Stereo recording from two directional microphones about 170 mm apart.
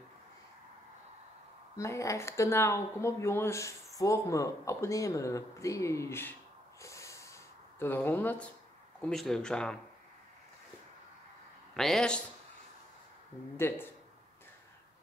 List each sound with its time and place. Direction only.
1.8 s speech: 20° left (ahead or behind)
6.8 s snort: 15° left (ahead or behind)
7.8 s speech: 10° left (ahead or behind)
11.7 s speech: 5° left (ahead or behind)
13.6 s speech: 15° left (ahead or behind)